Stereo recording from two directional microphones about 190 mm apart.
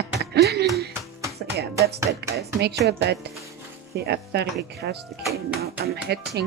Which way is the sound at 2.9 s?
60° right (ahead or behind).